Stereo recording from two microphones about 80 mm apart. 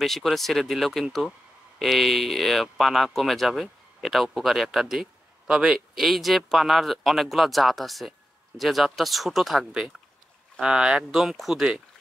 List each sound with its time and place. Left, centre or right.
0.0 s speech: centre